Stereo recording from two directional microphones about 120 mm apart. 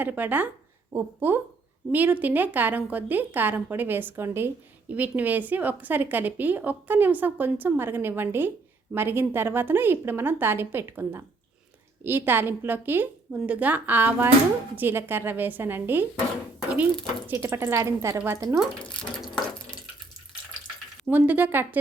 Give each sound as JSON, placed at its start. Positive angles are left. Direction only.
{"t": 0.0, "sound": "a woman's voice", "side_deg": -15}
{"t": 17.2, "sound": "a woman's voice", "side_deg": -20}
{"t": 21.1, "sound": "a woman's voice", "side_deg": -15}